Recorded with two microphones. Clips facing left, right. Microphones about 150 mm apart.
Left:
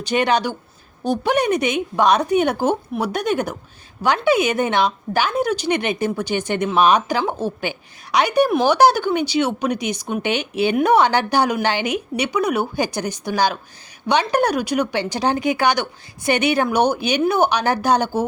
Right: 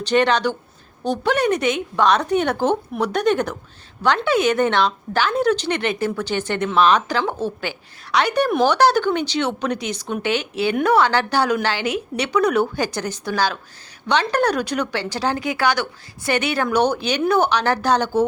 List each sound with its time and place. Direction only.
0.0 s a woman's voice: 10° left (ahead or behind)